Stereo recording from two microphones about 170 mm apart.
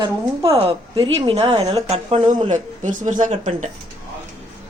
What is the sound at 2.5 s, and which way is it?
Speech, 45° right (ahead or behind).